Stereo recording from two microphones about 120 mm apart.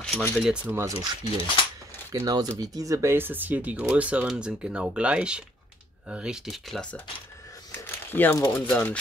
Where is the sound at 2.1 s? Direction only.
30° right (ahead or behind); by 6.9 s centre (ahead or behind).